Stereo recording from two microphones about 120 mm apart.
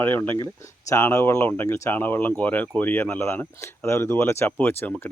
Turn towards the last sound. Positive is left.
turn(degrees=15)  # may be behind; listen again after turning